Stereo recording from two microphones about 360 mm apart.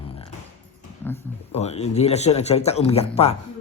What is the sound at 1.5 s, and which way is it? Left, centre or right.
Speech, centre.